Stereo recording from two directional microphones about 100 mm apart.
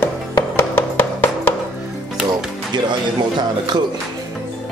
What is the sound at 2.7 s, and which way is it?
Speech, 50° right (ahead or behind).